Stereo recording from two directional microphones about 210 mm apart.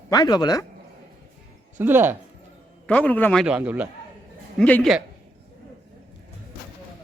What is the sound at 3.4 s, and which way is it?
Speech, 5° right (ahead or behind).